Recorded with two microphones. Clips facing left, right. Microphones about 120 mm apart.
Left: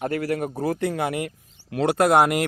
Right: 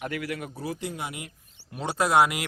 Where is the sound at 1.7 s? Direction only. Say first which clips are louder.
Left 6 dB; 75° left (ahead or behind); by 2.5 s 50° left (ahead or behind).